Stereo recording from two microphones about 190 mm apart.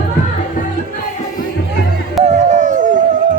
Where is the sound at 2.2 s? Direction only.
40° right (ahead or behind).